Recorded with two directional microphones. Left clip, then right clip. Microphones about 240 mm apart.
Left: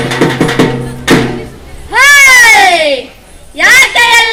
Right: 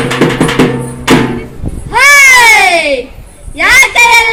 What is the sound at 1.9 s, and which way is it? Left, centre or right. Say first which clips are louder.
Cat: even; right.